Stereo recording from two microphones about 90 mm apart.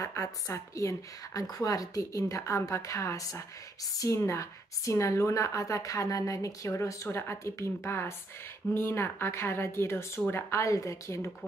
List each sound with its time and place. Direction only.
0.0 s a woman's voice: 35° left (ahead or behind)